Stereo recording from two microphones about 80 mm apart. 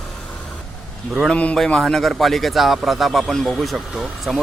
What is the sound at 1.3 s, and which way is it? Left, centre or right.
Speech, centre.